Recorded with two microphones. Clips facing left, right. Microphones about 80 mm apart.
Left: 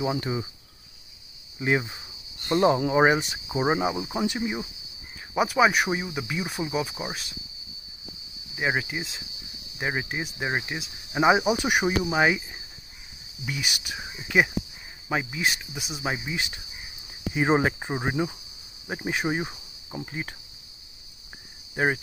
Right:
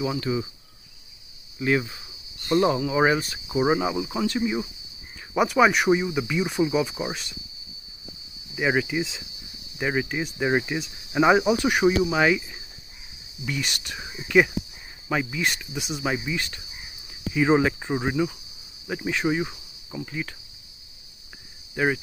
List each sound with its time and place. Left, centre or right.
0.0 s speech: left
1.6 s cricket: left
2.8 s speech: left
3.1 s speech: centre
5.3 s speech: centre
8.5 s speech: centre
13.5 s speech: centre
15.7 s speech: centre
16.3 s speech: centre
17.1 s speech: left
21.7 s speech: left